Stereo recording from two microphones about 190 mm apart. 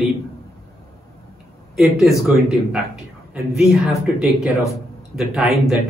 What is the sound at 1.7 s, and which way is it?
Speech, centre (ahead or behind).